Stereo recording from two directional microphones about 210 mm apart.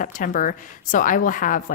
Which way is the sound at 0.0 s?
40° left (ahead or behind).